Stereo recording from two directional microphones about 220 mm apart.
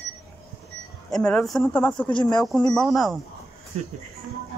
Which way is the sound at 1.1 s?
5° left (ahead or behind).